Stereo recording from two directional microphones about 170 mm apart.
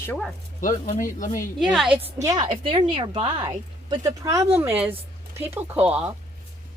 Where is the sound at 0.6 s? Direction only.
50° left (ahead or behind).